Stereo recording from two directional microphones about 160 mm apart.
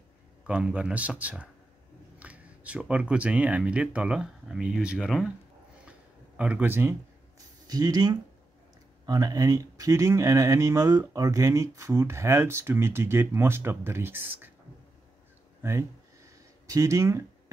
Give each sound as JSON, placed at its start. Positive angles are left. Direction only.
{"t": 0.5, "sound": "a man's voice", "side_deg": -5}
{"t": 5.9, "sound": "a sound", "side_deg": -10}
{"t": 9.0, "sound": "speech", "side_deg": -20}
{"t": 15.6, "sound": "a man's voice", "side_deg": -15}